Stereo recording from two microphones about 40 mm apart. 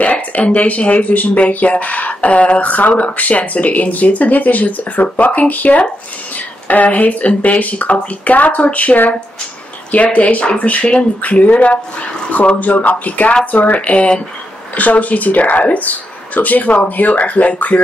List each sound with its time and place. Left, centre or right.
0.0 s speech: left
13.7 s speech: left